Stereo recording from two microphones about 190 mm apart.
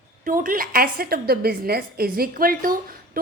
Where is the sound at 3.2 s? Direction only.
50° right (ahead or behind).